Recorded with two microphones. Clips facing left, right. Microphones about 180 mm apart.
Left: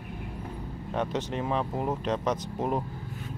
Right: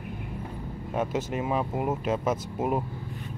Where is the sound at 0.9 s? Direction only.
5° right (ahead or behind).